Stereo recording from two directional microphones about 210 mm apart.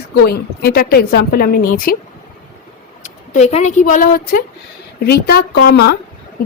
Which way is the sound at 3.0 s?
35° left (ahead or behind).